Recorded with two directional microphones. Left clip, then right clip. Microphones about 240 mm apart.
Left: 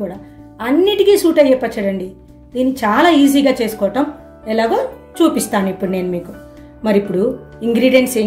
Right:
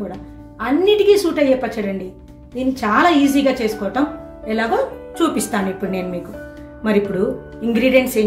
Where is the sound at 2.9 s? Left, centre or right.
Left.